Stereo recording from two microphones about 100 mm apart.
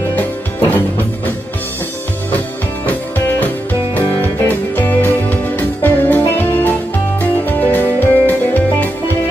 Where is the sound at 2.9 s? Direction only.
20° left (ahead or behind).